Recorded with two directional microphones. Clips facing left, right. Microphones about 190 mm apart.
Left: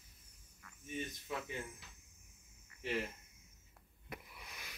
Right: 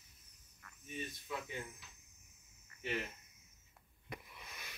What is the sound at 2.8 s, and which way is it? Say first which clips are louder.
Speech: left 2 dB; 30° left (ahead or behind).